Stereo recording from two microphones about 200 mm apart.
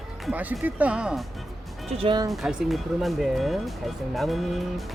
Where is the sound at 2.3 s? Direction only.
Centre (ahead or behind).